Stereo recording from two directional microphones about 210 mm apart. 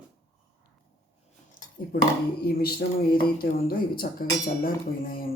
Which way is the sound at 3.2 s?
45° left (ahead or behind).